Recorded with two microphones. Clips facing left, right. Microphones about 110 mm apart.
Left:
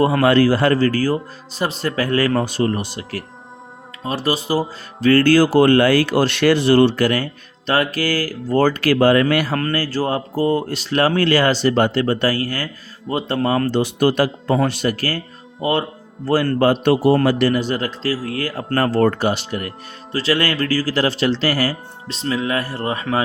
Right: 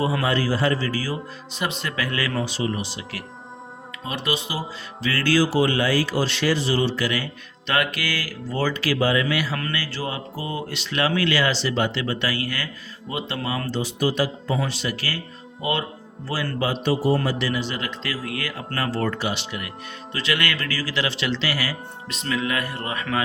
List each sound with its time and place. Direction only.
0.0 s speech: 60° left (ahead or behind)
7.7 s speech: 35° left (ahead or behind)
16.2 s speech: 50° left (ahead or behind); by 23.2 s 30° left (ahead or behind)